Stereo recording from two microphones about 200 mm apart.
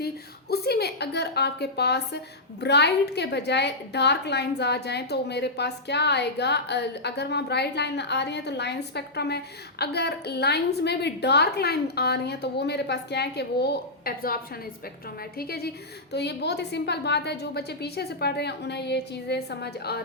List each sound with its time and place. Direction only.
0.5 s a woman's voice: 50° left (ahead or behind)
15.4 s a woman's voice: 50° left (ahead or behind)